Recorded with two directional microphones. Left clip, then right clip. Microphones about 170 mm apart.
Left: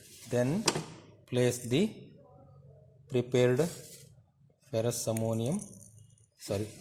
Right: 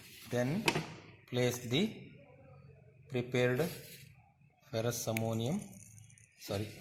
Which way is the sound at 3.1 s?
50° left (ahead or behind).